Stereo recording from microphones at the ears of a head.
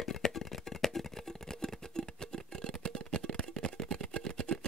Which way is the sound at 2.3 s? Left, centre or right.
Right.